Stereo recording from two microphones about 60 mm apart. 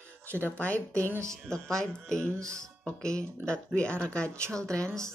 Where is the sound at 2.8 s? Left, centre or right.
Centre.